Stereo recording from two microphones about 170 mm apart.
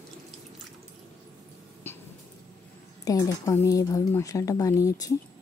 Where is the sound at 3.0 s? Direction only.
20° left (ahead or behind).